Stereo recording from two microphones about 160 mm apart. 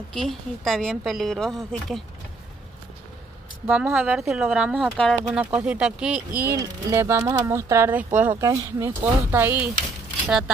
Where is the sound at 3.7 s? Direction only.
10° right (ahead or behind).